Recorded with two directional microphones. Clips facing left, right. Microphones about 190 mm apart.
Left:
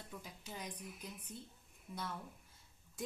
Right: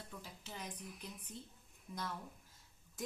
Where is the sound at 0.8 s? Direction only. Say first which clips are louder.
Even; centre (ahead or behind).